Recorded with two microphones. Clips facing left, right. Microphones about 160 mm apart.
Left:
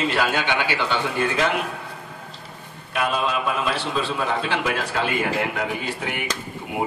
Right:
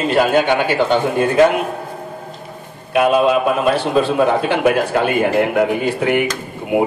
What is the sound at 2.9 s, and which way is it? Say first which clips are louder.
A man's voice: right 10 dB; 50° right (ahead or behind).